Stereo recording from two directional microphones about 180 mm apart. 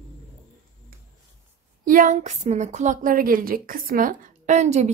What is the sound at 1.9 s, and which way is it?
Speech, 45° right (ahead or behind).